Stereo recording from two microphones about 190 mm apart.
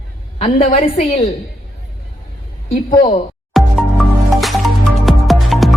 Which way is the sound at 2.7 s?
45° left (ahead or behind).